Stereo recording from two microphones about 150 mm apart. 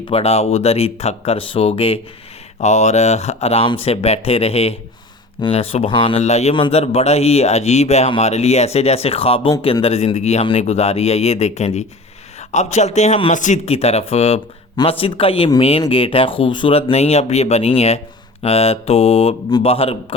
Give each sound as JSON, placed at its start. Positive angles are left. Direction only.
{"t": 0.1, "sound": "speech", "side_deg": 45}
{"t": 2.6, "sound": "speech", "side_deg": 50}